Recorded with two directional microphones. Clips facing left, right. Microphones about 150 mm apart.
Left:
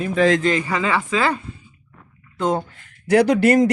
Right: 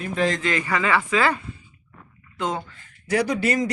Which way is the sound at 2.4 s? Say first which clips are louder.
Left 6 dB; 40° left (ahead or behind).